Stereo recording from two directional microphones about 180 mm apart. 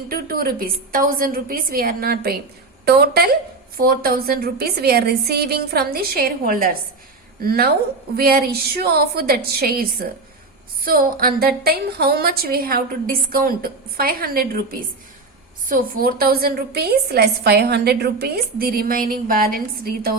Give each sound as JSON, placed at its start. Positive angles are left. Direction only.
{"t": 0.1, "sound": "a woman's voice", "side_deg": -55}